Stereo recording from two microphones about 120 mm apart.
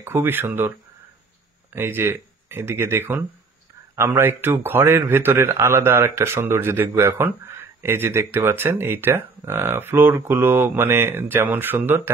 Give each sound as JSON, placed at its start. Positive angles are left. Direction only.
{"t": 0.0, "sound": "a man's voice", "side_deg": -20}